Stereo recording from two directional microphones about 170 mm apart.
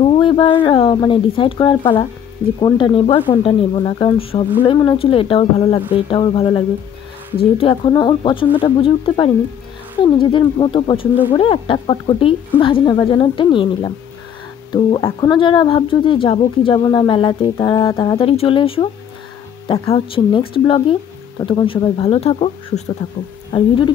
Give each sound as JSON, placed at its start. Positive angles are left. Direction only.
{"t": 0.0, "sound": "speech", "side_deg": 30}
{"t": 19.9, "sound": "speech", "side_deg": 30}